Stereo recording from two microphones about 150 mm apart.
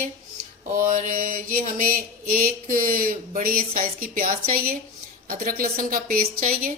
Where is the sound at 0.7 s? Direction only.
60° right (ahead or behind).